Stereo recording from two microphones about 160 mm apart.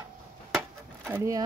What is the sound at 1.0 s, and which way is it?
Speech, 15° right (ahead or behind).